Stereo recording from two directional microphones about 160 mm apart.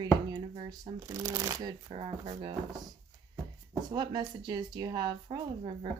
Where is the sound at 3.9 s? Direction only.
25° right (ahead or behind).